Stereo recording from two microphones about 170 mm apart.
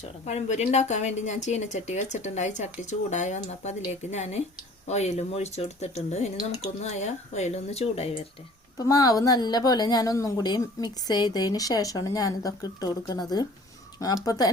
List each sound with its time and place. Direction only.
0.0 s speech: 40° left (ahead or behind)
8.8 s a woman's voice: 20° left (ahead or behind)
14.3 s a woman's voice: 20° left (ahead or behind)